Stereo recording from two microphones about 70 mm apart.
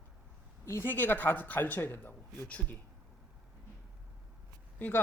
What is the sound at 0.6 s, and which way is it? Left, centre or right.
Speech, left.